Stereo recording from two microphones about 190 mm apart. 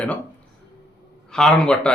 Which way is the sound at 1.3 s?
5° left (ahead or behind).